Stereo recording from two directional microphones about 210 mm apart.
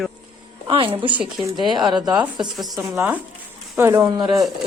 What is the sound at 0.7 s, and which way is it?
Speech, 25° right (ahead or behind).